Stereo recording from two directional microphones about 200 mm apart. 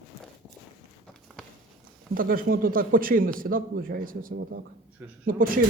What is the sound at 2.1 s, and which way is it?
Speech, 45° right (ahead or behind).